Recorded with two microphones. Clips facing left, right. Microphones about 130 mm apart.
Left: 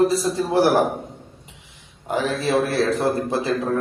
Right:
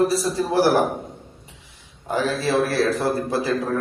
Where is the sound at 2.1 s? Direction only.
20° left (ahead or behind).